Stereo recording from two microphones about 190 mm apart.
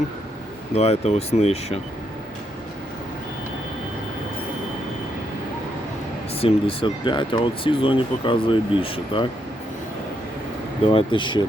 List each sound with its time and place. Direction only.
0.7 s speech: 35° left (ahead or behind)
6.4 s speech: 30° left (ahead or behind)
10.9 s speech: 25° left (ahead or behind)